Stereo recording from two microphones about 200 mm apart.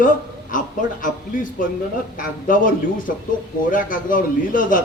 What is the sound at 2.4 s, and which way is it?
A man's voice, 45° left (ahead or behind).